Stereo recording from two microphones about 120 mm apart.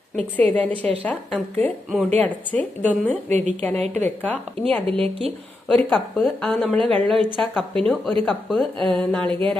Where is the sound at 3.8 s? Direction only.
65° right (ahead or behind).